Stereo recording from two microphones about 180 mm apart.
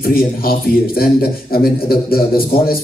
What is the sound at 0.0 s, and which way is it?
A man's voice, 55° left (ahead or behind).